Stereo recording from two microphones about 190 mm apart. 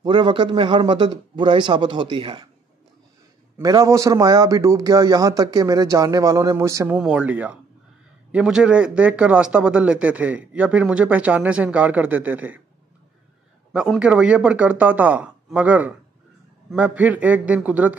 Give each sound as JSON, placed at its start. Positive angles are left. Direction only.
{"t": 0.0, "sound": "a man's voice", "side_deg": -25}
{"t": 3.5, "sound": "speech", "side_deg": -15}
{"t": 13.7, "sound": "speech", "side_deg": -5}